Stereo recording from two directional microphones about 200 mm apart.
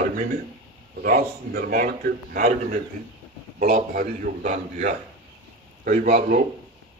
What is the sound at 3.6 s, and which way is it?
A man's voice, 40° right (ahead or behind).